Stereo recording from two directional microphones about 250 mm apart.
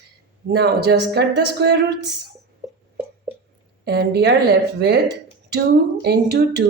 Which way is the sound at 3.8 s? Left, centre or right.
Right.